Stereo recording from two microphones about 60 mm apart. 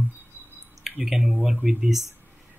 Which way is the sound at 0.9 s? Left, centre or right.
Centre.